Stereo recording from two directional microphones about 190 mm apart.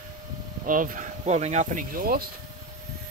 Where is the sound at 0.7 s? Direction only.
45° right (ahead or behind).